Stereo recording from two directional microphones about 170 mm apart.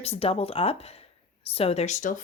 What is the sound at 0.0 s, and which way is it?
Speech, 35° left (ahead or behind).